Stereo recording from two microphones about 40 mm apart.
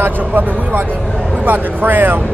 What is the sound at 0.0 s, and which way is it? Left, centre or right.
Speech, right.